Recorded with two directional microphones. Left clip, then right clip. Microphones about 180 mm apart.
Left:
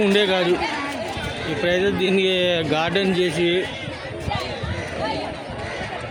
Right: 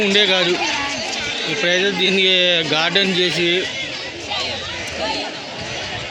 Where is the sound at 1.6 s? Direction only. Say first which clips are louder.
Right 3 dB; 15° left (ahead or behind).